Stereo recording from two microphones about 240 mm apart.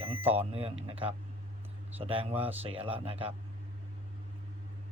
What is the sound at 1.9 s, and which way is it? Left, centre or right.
Speech, right.